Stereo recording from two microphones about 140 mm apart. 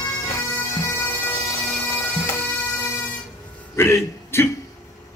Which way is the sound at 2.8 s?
20° left (ahead or behind).